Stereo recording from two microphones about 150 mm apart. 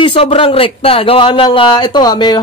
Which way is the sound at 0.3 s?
35° left (ahead or behind).